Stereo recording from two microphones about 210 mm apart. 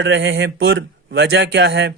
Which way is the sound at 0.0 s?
60° right (ahead or behind).